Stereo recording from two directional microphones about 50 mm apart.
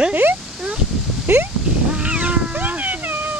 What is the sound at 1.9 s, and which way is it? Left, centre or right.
Vehicle, right.